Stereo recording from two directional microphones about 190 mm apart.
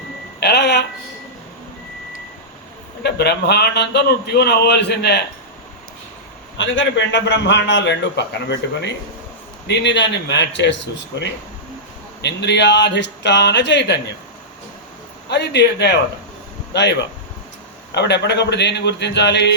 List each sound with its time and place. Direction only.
0.3 s telephone: 60° left (ahead or behind)
3.0 s a man's voice: 60° left (ahead or behind)
6.6 s a man's voice: 75° left (ahead or behind)
15.3 s a man's voice: 60° left (ahead or behind)
17.9 s a man's voice: 65° left (ahead or behind)